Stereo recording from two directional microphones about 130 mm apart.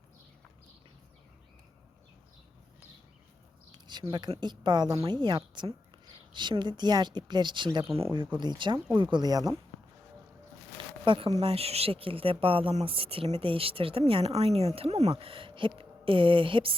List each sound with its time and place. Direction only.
3.7 s a sound: 35° right (ahead or behind)
4.1 s a woman's voice: 35° right (ahead or behind)
11.0 s speech: 40° right (ahead or behind)